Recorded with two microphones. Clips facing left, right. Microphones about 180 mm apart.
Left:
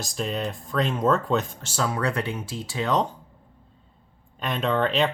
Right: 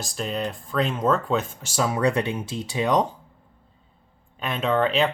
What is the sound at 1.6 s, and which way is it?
Speech, 15° right (ahead or behind).